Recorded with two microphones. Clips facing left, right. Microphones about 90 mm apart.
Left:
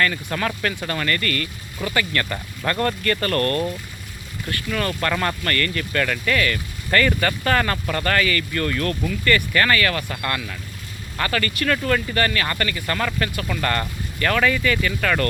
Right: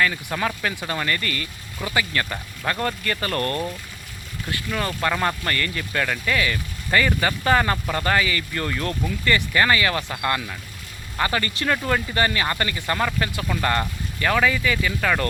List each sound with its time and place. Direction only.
0.0 s speech: 10° right (ahead or behind)